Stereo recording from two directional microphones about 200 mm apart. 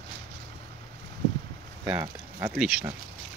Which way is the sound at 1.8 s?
10° right (ahead or behind).